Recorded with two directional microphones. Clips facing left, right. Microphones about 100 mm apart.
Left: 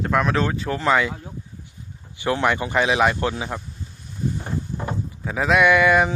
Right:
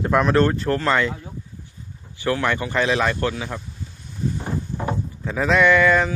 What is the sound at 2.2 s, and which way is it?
Speech, 20° left (ahead or behind).